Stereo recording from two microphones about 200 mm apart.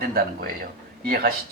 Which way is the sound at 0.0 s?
50° right (ahead or behind).